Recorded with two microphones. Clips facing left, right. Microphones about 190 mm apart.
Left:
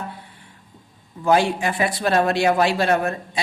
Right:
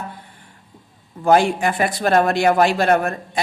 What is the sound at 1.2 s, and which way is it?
Speech, 50° right (ahead or behind).